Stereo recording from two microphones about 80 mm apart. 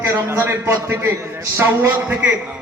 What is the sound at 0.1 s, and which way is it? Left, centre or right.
A man's voice, right.